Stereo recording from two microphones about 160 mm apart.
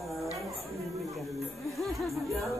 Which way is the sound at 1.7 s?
Centre (ahead or behind).